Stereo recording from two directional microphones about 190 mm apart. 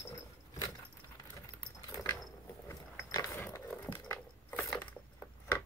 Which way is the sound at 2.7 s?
15° left (ahead or behind).